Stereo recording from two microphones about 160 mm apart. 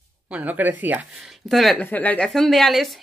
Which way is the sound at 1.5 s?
Centre (ahead or behind).